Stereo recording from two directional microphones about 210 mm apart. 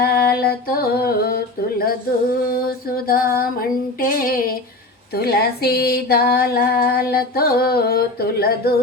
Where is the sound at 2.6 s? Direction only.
45° left (ahead or behind).